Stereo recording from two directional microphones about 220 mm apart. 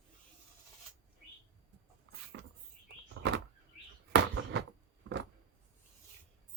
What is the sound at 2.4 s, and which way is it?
Rodents, 55° right (ahead or behind).